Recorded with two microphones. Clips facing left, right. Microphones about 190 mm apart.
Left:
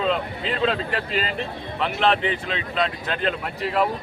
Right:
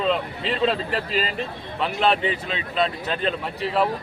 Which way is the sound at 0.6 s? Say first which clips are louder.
Even; 35° right (ahead or behind).